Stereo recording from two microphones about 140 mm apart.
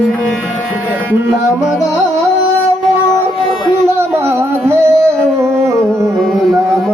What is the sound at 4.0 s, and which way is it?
Singing, 20° right (ahead or behind).